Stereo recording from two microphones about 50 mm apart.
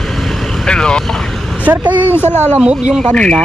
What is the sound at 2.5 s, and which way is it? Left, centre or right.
Speech, right.